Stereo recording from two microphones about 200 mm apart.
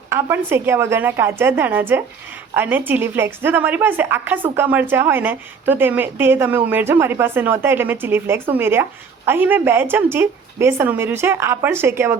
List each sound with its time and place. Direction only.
0.1 s a woman's voice: 10° right (ahead or behind)